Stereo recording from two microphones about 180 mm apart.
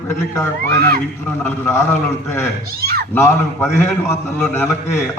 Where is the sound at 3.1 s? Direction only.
15° left (ahead or behind).